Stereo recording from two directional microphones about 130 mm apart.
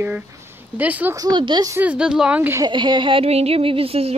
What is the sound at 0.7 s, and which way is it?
Speech, 15° right (ahead or behind).